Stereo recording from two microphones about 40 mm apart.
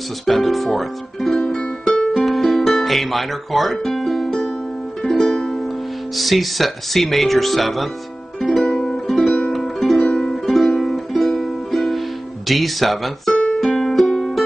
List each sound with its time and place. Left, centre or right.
0.3 s speech: centre
1.3 s music: left
2.1 s music: centre
6.1 s speech: centre
8.5 s music: centre
9.9 s music: centre
10.4 s music: centre
12.4 s speech: centre
13.7 s music: centre